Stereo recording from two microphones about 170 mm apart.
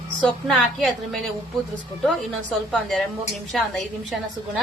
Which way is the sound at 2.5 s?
Centre (ahead or behind).